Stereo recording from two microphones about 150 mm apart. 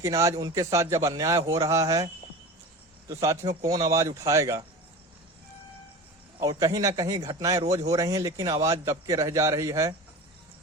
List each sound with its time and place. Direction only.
0.0 s a man's voice: 20° right (ahead or behind)
3.1 s a man's voice: 20° right (ahead or behind)
6.4 s a man's voice: 25° right (ahead or behind)